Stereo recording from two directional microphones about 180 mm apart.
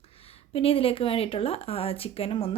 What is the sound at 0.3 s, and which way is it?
A woman's voice, 30° left (ahead or behind).